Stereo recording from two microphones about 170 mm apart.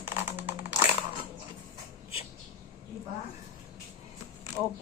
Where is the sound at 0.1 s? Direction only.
15° right (ahead or behind).